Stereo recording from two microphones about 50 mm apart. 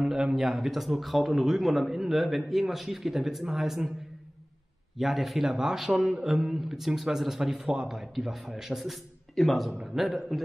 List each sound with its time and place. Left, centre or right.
0.0 s a man's voice: centre
4.9 s a man's voice: centre